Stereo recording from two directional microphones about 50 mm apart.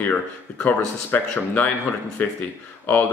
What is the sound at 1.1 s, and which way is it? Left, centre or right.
Speech, left.